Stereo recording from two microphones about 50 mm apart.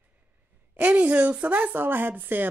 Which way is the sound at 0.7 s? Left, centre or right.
Right.